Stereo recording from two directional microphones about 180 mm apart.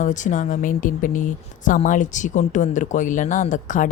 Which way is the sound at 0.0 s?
45° left (ahead or behind).